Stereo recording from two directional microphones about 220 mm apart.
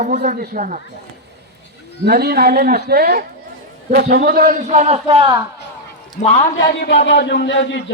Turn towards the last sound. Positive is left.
turn(degrees=55)  # may be behind; listen again after turning